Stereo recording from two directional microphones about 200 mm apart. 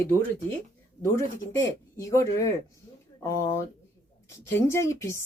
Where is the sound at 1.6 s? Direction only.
15° left (ahead or behind).